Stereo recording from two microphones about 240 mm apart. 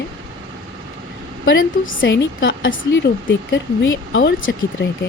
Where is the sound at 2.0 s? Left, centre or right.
Left.